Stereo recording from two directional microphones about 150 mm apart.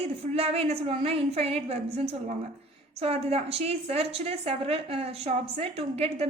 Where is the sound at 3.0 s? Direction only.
45° right (ahead or behind).